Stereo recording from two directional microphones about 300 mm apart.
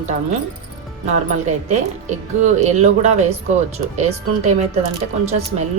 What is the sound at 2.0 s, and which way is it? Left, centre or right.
A woman's voice, right.